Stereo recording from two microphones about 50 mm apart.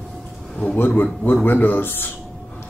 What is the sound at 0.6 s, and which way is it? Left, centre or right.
A man's voice, left.